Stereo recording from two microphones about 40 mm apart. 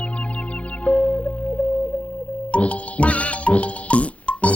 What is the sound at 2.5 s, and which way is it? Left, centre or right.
Music, left.